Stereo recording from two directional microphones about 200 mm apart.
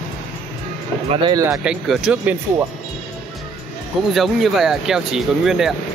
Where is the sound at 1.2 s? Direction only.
20° right (ahead or behind).